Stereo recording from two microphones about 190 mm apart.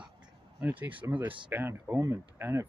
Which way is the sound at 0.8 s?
10° right (ahead or behind).